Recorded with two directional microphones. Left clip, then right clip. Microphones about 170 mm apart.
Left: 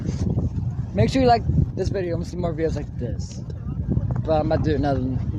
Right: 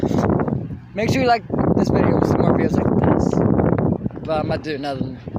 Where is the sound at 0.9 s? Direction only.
20° right (ahead or behind).